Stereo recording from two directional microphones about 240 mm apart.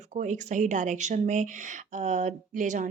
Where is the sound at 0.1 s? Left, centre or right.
Right.